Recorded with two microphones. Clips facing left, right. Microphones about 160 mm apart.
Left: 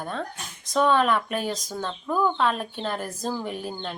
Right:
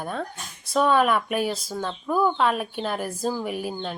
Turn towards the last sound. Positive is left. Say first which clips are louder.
# right 3 dB
turn(degrees=-10)  # may be behind; listen again after turning